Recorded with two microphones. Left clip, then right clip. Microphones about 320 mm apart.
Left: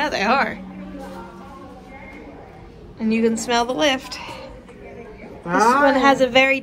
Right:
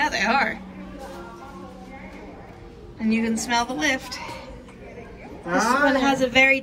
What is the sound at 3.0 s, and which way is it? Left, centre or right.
A woman's voice, centre.